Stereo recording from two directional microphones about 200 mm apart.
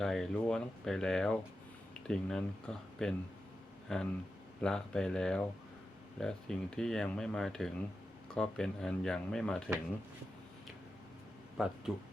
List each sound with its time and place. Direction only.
0.0 s speech: centre (ahead or behind)
11.6 s speech: centre (ahead or behind)